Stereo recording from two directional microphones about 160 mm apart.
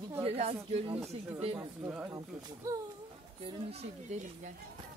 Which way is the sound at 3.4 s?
40° right (ahead or behind).